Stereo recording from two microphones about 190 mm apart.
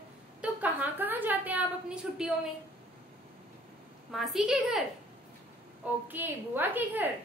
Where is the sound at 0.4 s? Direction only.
10° right (ahead or behind).